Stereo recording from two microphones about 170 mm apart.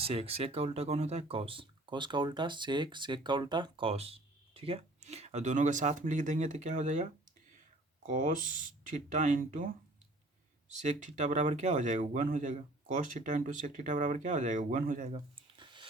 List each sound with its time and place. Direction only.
0.0 s speech: 35° right (ahead or behind)
10.8 s speech: 45° right (ahead or behind)
15.4 s a sound: 30° right (ahead or behind)